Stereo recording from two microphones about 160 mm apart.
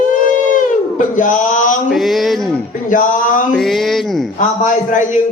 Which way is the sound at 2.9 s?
55° left (ahead or behind).